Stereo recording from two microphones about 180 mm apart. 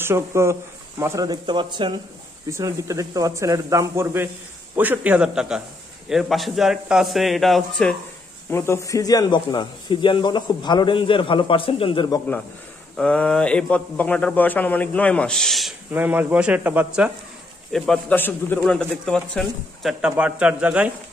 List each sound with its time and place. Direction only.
0.0 s a man's voice: 15° right (ahead or behind); by 7.9 s centre (ahead or behind)
8.5 s speech: 15° left (ahead or behind)
12.9 s a man's voice: 5° left (ahead or behind)
15.9 s speech: 10° right (ahead or behind)
17.7 s a man's voice: 5° left (ahead or behind)